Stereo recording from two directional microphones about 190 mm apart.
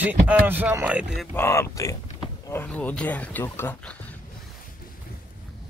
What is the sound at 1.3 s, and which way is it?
Speech, 15° left (ahead or behind).